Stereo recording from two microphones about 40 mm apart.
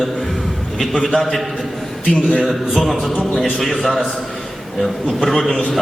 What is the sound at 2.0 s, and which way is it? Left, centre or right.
Speech, centre.